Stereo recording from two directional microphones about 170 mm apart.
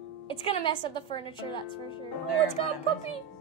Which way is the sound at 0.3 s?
30° left (ahead or behind).